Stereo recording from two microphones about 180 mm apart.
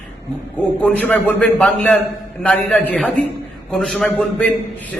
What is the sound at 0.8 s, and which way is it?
A man's voice, 5° left (ahead or behind).